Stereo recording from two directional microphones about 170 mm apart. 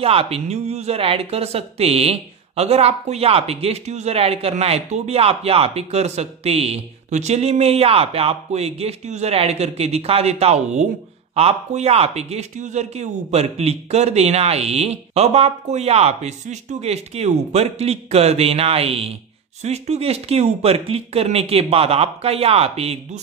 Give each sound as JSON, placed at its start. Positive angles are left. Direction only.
{"t": 0.0, "sound": "speech", "side_deg": -35}